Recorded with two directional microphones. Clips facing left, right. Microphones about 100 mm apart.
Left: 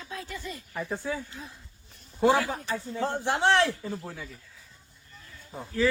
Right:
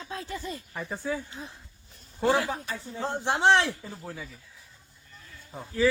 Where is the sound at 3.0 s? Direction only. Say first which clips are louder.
Right 2 dB; 20° right (ahead or behind).